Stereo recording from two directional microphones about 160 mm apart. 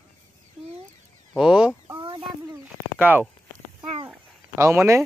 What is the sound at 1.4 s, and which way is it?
Speech, 5° right (ahead or behind).